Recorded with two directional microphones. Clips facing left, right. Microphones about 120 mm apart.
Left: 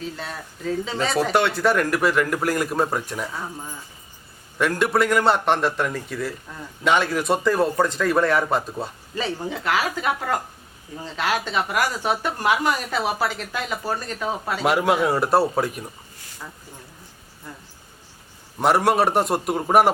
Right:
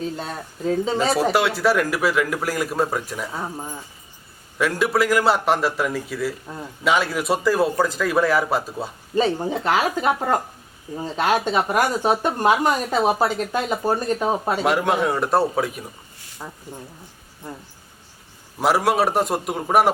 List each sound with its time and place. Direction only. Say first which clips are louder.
0.2 s speech: right 4 dB; 30° right (ahead or behind)
1.1 s a man's voice: left 3 dB; 5° right (ahead or behind)
3.3 s speech: right 3 dB; 25° right (ahead or behind)
4.5 s a man's voice: even; centre (ahead or behind)
9.5 s speech: right 3 dB; 25° right (ahead or behind)
11.0 s speech: right 4 dB; 45° right (ahead or behind)
11.3 s speech: right 4 dB; 25° right (ahead or behind)
11.8 s speech: right 3 dB; 20° right (ahead or behind)
14.6 s a man's voice: left 3 dB; centre (ahead or behind)
16.4 s speech: right 3 dB; 30° right (ahead or behind)
18.6 s a man's voice: even; centre (ahead or behind)